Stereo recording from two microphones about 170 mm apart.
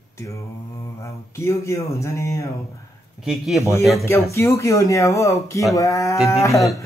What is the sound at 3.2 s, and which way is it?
Speech, centre (ahead or behind).